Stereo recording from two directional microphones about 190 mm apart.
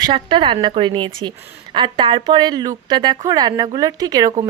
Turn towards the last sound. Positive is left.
turn(degrees=-20)  # may be behind; listen again after turning